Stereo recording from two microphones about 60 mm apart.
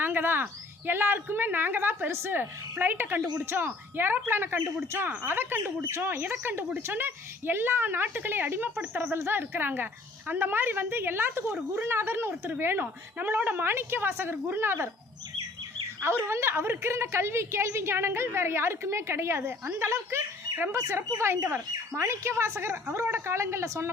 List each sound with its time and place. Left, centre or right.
0.0 s a woman's voice: right
13.1 s a woman's voice: right
16.0 s a woman's voice: right